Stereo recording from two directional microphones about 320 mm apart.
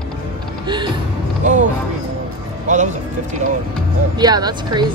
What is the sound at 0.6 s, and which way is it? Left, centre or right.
Speech, centre.